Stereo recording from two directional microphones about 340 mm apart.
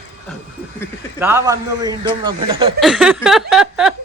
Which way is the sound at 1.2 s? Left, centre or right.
Centre.